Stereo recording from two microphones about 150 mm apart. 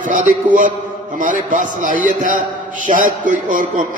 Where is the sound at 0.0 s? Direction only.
60° right (ahead or behind).